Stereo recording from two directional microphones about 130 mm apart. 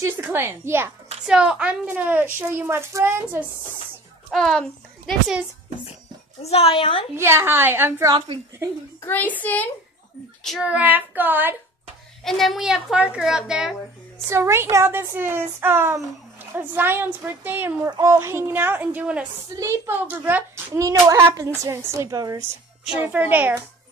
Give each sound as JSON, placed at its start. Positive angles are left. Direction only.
{"t": 0.0, "sound": "a woman's voice", "side_deg": -15}
{"t": 1.2, "sound": "a woman's voice", "side_deg": -5}
{"t": 4.3, "sound": "a child's voice", "side_deg": 0}
{"t": 6.4, "sound": "a woman's voice", "side_deg": 50}
{"t": 7.2, "sound": "a woman's voice", "side_deg": -20}
{"t": 9.0, "sound": "a woman's voice", "side_deg": 15}
{"t": 10.6, "sound": "a woman's voice", "side_deg": -10}
{"t": 12.3, "sound": "a woman's voice", "side_deg": 0}
{"t": 14.3, "sound": "a woman's voice", "side_deg": -20}
{"t": 17.8, "sound": "a child's voice", "side_deg": -30}
{"t": 18.1, "sound": "a woman's voice", "side_deg": -20}
{"t": 22.9, "sound": "a woman's voice", "side_deg": -15}